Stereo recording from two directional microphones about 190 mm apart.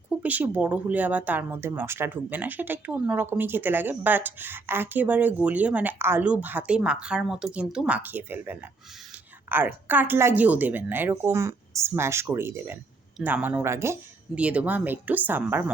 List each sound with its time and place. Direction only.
0.2 s speech: 10° right (ahead or behind)